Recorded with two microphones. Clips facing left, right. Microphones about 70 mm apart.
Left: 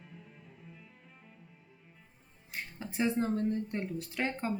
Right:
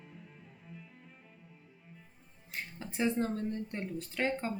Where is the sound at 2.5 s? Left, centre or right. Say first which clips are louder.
Left 2 dB; centre.